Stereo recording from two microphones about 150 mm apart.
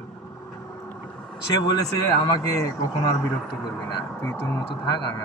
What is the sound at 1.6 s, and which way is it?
A man's voice, 25° left (ahead or behind).